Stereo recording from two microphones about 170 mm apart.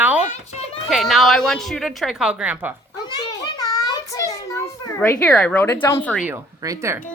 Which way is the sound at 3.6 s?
20° left (ahead or behind).